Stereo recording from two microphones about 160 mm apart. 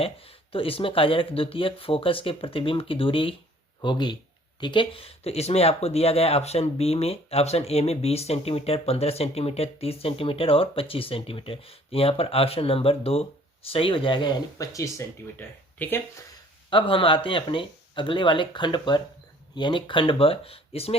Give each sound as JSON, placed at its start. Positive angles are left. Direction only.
{"t": 0.0, "sound": "speech", "side_deg": 35}
{"t": 16.6, "sound": "speech", "side_deg": 35}